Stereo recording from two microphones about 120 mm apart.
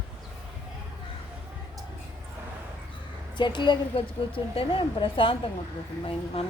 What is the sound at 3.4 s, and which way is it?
A woman's voice, 40° left (ahead or behind).